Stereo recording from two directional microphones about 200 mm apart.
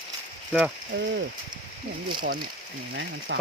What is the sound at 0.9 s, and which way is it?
Speech, 60° right (ahead or behind).